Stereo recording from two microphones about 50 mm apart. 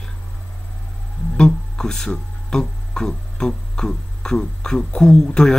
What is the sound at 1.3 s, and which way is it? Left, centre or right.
Speech, centre.